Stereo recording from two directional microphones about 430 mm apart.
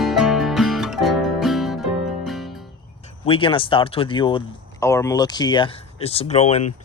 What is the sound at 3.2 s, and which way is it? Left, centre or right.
Speech, centre.